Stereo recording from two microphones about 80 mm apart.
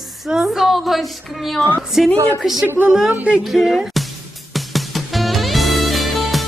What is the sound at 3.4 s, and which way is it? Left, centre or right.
Music, centre.